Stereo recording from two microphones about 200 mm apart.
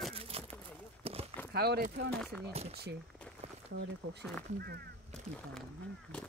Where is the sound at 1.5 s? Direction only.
55° right (ahead or behind).